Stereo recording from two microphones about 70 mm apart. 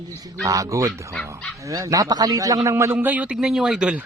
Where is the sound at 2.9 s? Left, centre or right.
Right.